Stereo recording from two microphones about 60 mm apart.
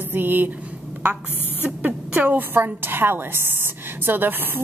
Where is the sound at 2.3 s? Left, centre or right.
Right.